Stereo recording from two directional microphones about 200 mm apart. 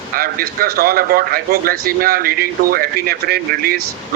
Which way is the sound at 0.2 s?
45° right (ahead or behind).